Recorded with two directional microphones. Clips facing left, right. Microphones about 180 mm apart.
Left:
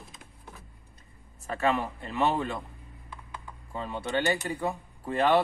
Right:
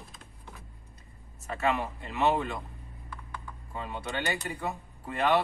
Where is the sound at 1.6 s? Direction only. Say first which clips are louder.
Left 2 dB; 35° left (ahead or behind).